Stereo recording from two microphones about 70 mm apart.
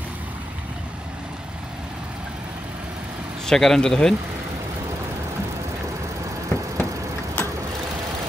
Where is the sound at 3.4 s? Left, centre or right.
Centre.